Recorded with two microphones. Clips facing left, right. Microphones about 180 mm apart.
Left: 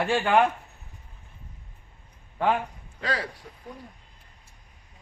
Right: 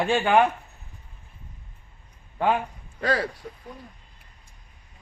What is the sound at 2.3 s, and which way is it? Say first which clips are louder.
Speech: right 1 dB; 10° right (ahead or behind).